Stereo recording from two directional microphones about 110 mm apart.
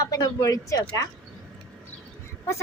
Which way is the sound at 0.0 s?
35° left (ahead or behind).